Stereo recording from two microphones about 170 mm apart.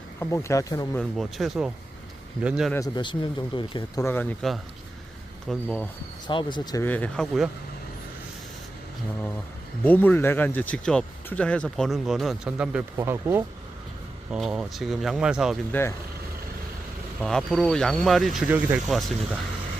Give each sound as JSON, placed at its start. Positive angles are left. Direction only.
{"t": 0.2, "sound": "speech", "side_deg": 15}
{"t": 0.9, "sound": "speech", "side_deg": 0}
{"t": 2.7, "sound": "speech", "side_deg": 25}
{"t": 4.0, "sound": "speech", "side_deg": 10}
{"t": 5.5, "sound": "speech", "side_deg": 5}
{"t": 6.2, "sound": "speech", "side_deg": 25}
{"t": 6.8, "sound": "speech", "side_deg": 10}
{"t": 9.8, "sound": "speech", "side_deg": 10}
{"t": 13.0, "sound": "speech", "side_deg": -15}
{"t": 14.3, "sound": "speech", "side_deg": -5}
{"t": 15.7, "sound": "speech", "side_deg": 10}
{"t": 17.2, "sound": "speech", "side_deg": 0}
{"t": 18.4, "sound": "speech", "side_deg": -10}
{"t": 18.9, "sound": "speech", "side_deg": 0}